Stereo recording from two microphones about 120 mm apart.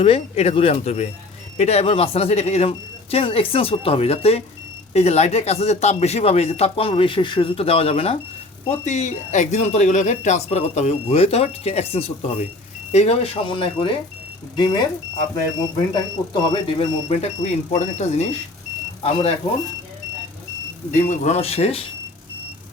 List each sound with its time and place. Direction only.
0.0 s a man's voice: 55° left (ahead or behind)
8.8 s a man's voice: 75° left (ahead or behind); by 16.6 s 30° left (ahead or behind)
16.6 s speech: 60° left (ahead or behind)
20.9 s a man's voice: 85° left; by 21.8 s 55° left (ahead or behind)